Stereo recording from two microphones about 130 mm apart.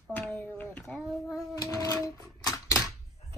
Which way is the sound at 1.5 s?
25° left (ahead or behind).